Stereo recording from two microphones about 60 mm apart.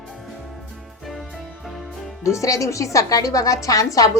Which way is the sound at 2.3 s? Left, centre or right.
Left.